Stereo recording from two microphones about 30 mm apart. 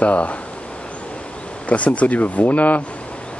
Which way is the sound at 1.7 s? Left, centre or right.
Left.